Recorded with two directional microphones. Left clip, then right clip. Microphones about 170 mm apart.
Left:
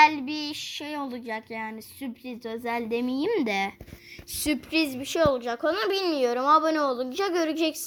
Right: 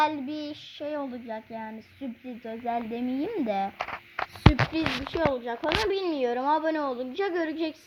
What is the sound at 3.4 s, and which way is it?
Speech, 10° left (ahead or behind).